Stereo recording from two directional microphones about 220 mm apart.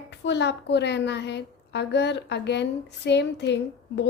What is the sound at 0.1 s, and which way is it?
A woman's voice, 50° left (ahead or behind).